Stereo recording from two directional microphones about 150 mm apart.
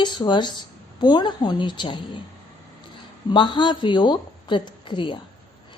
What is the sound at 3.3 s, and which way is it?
A woman's voice, 30° left (ahead or behind).